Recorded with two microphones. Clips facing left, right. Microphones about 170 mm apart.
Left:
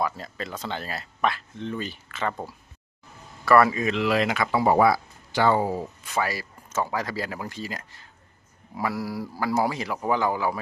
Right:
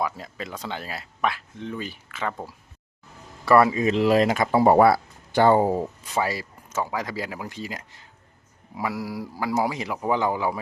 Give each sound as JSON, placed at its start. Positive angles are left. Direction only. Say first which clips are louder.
{"t": 0.0, "sound": "speech", "louder": "even", "side_deg": -15}
{"t": 3.4, "sound": "speech", "louder": "right 1 dB", "side_deg": -20}
{"t": 4.8, "sound": "speech", "louder": "right 3 dB", "side_deg": -55}
{"t": 5.5, "sound": "speech", "louder": "right 4 dB", "side_deg": -25}
{"t": 6.7, "sound": "speech", "louder": "left 1 dB", "side_deg": -15}